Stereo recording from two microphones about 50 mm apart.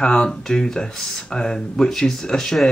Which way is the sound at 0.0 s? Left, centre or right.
Centre.